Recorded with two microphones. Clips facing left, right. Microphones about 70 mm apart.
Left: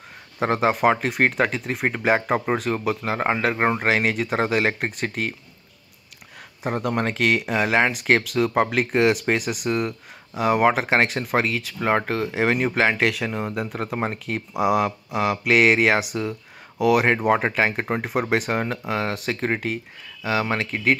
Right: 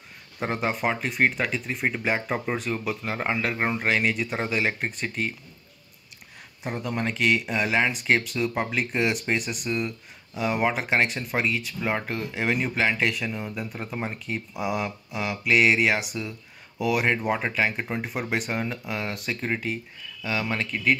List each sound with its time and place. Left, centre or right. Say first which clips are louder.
0.4 s speech: left 7 dB; left
6.8 s speech: left 3 dB; left
13.0 s speech: left 4 dB; left
20.2 s speech: left 5 dB; left